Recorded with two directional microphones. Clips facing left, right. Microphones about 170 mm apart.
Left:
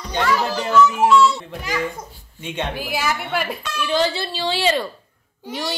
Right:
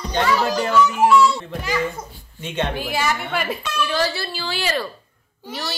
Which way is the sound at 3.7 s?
20° left (ahead or behind).